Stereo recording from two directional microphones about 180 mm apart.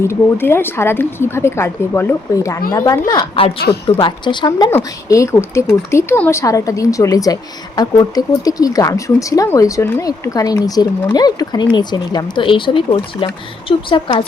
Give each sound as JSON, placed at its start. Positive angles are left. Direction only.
{"t": 0.0, "sound": "speech", "side_deg": 15}
{"t": 3.1, "sound": "speech", "side_deg": 30}